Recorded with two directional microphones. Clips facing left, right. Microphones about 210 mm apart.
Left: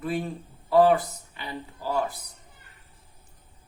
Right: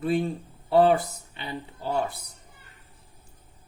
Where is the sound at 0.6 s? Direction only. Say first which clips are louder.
Even; 30° right (ahead or behind).